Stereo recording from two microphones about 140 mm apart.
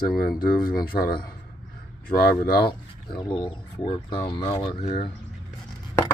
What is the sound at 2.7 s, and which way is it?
Speech, 35° left (ahead or behind).